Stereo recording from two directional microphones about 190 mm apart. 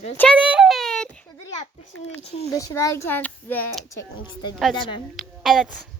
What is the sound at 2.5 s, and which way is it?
Speech, 15° left (ahead or behind).